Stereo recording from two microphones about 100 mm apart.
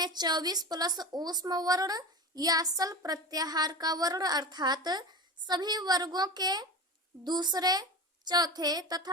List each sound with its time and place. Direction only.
0.0 s a woman's voice: 45° right (ahead or behind)